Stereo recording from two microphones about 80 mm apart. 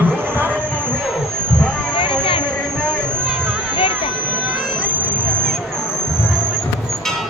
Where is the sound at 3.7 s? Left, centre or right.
Left.